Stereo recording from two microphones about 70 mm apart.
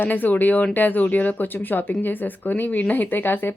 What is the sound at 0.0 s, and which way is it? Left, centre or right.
Speech, left.